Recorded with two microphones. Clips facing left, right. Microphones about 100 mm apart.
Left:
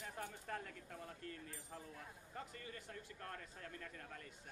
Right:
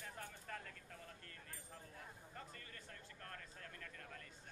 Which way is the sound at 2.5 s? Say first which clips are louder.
Left 4 dB; 15° left (ahead or behind).